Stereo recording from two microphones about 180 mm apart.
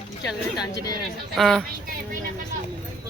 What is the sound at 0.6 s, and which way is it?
Speech, 20° left (ahead or behind).